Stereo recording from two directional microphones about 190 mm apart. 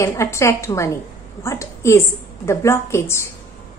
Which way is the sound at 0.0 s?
15° left (ahead or behind).